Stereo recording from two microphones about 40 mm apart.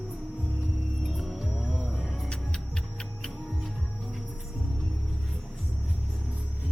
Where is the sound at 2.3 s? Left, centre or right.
Left.